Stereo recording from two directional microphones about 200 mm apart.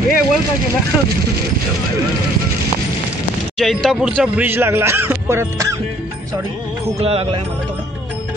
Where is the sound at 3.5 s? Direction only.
Centre (ahead or behind).